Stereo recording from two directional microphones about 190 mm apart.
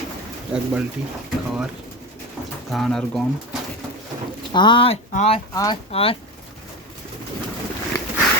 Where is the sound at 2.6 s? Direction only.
Centre (ahead or behind).